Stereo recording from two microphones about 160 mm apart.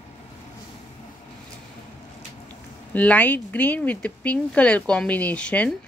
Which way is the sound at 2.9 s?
10° left (ahead or behind).